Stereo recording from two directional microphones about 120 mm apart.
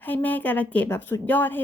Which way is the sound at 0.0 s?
15° left (ahead or behind).